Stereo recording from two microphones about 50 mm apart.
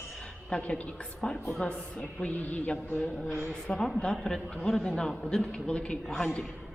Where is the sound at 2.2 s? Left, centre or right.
Left.